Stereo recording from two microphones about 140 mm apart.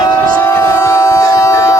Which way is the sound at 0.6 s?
20° left (ahead or behind).